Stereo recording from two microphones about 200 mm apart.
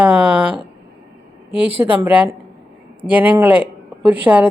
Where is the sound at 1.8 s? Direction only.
10° right (ahead or behind).